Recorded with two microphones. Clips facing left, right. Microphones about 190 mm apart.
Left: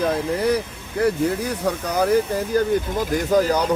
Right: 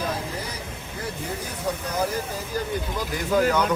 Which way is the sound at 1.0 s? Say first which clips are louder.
Left 13 dB; 70° left (ahead or behind).